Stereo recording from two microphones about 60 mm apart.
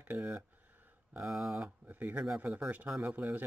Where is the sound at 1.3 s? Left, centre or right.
Centre.